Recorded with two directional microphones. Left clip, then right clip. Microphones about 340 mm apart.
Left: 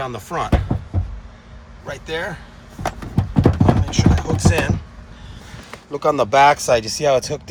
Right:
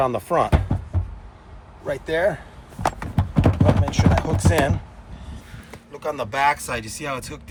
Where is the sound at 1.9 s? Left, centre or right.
Centre.